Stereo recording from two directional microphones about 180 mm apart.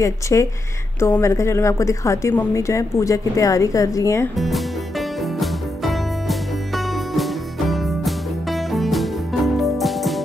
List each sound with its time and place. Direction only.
0.0 s a woman's voice: 15° left (ahead or behind)
4.4 s music: centre (ahead or behind)